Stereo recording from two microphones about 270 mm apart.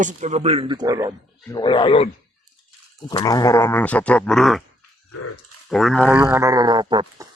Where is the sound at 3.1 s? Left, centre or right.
Centre.